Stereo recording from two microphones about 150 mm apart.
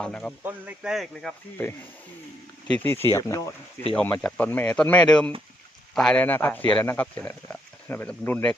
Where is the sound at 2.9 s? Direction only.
15° left (ahead or behind).